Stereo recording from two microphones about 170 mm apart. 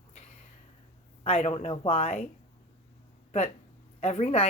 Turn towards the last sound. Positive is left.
turn(degrees=40)  # may be behind; listen again after turning